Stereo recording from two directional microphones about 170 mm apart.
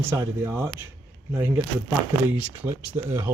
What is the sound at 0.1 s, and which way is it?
Speech, 15° right (ahead or behind).